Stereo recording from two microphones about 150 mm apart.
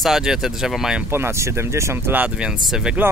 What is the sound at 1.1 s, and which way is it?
Speech, 15° right (ahead or behind).